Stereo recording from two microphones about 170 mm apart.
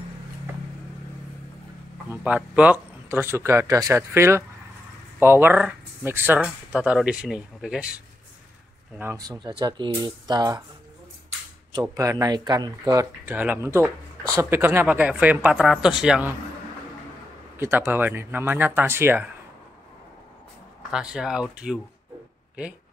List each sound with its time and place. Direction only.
2.0 s speech: 10° right (ahead or behind)
9.1 s speech: 20° right (ahead or behind)
11.7 s speech: 20° right (ahead or behind); by 16.3 s 5° right (ahead or behind)
17.6 s speech: 15° right (ahead or behind)
20.9 s speech: 5° right (ahead or behind)